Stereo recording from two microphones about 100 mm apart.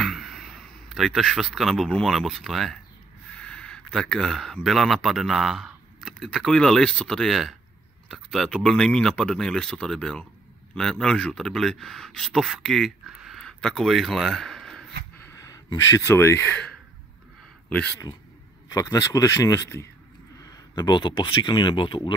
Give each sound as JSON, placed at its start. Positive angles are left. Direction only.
{"t": 0.0, "sound": "speech", "side_deg": 0}
{"t": 15.3, "sound": "speech", "side_deg": 35}
{"t": 18.7, "sound": "speech", "side_deg": 35}